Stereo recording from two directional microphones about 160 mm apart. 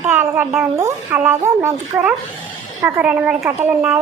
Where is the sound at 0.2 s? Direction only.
15° right (ahead or behind).